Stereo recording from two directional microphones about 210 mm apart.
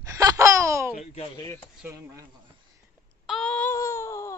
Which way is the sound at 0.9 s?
30° left (ahead or behind).